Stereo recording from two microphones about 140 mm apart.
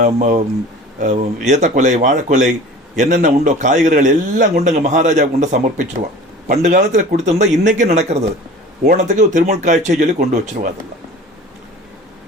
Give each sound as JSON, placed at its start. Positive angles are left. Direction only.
{"t": 0.0, "sound": "a man's voice", "side_deg": -60}
{"t": 6.5, "sound": "a man's voice", "side_deg": -70}